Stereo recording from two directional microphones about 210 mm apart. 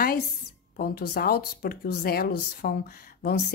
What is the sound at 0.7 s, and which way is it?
A woman's voice, 45° left (ahead or behind).